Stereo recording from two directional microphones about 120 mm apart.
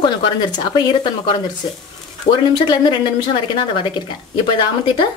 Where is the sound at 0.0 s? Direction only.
35° left (ahead or behind).